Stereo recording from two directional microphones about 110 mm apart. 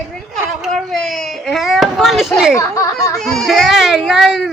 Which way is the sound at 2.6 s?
30° left (ahead or behind).